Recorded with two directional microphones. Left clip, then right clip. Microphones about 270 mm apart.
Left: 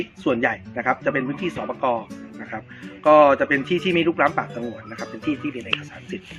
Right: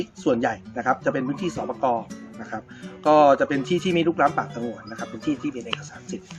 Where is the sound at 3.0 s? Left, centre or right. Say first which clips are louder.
Left 2 dB; centre.